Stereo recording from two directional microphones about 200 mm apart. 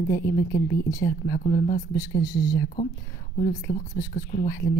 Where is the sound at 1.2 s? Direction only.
45° left (ahead or behind).